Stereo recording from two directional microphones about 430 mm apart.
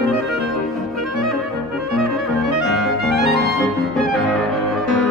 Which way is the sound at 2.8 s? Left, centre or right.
Centre.